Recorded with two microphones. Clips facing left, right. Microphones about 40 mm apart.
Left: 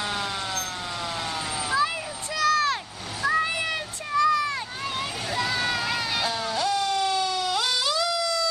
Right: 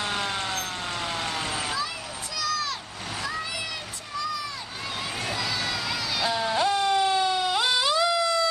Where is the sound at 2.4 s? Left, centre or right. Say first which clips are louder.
Left 7 dB; left.